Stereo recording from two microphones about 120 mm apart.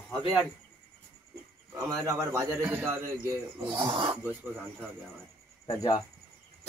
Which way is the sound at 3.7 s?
45° right (ahead or behind).